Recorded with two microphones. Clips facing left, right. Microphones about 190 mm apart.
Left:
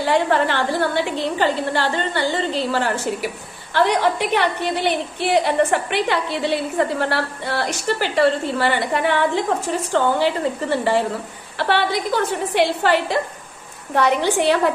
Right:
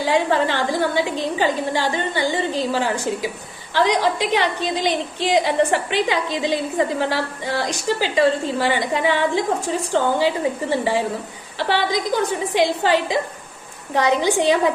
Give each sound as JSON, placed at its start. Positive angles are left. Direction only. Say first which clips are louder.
{"t": 0.0, "sound": "a woman's voice", "louder": "left 1 dB", "side_deg": -15}